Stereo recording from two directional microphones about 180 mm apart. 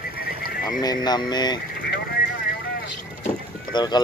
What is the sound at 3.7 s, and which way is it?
Speech, 25° left (ahead or behind).